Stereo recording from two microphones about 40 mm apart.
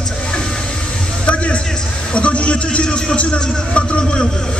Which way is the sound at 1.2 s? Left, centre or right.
Left.